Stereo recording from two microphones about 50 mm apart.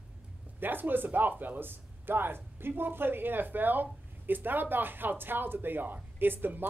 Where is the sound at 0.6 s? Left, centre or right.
Right.